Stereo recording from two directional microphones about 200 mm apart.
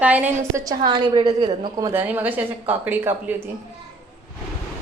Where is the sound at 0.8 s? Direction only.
20° right (ahead or behind).